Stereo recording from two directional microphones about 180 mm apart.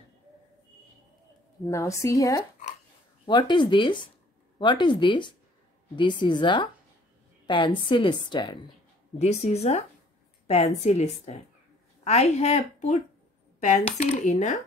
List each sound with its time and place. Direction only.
1.7 s a woman's voice: 15° left (ahead or behind)
9.2 s a woman's voice: 35° left (ahead or behind)